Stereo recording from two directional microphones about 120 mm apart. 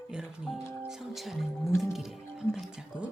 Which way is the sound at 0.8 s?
5° right (ahead or behind).